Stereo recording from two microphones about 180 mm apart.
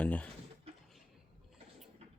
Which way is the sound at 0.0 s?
10° left (ahead or behind).